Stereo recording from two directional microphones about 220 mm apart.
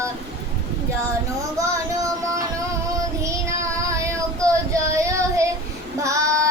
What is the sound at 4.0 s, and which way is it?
Child singing, 15° right (ahead or behind).